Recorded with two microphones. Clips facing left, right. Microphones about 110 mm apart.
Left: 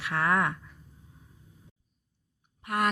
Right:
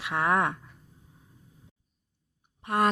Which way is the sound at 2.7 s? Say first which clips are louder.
Right 3 dB; 25° right (ahead or behind).